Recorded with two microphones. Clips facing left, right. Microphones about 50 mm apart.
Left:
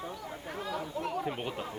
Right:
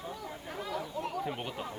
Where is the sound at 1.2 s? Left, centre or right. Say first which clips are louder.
Left 1 dB; centre.